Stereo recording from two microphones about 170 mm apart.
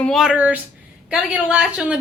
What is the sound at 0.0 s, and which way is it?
Speech, centre (ahead or behind).